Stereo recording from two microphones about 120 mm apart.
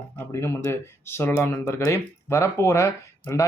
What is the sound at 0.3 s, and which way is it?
Speech, 20° left (ahead or behind).